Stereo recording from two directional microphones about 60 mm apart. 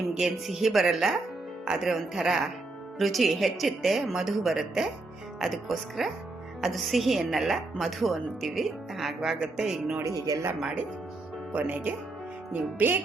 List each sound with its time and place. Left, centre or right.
0.1 s a woman's voice: centre
10.1 s speech: right
10.6 s speech: centre
11.5 s speech: right